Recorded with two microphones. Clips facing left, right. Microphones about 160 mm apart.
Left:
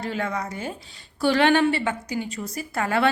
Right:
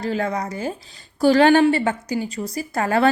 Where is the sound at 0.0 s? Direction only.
40° right (ahead or behind).